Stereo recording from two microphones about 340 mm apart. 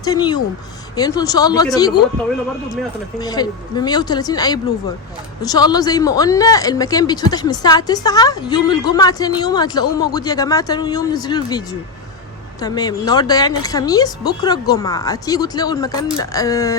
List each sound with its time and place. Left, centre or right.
0.0 s speech: centre
3.2 s speech: centre